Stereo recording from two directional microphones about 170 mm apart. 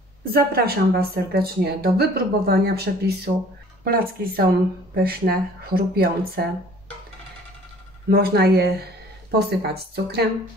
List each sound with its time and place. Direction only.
0.3 s a woman's voice: 65° right (ahead or behind)
8.1 s a woman's voice: 65° right (ahead or behind)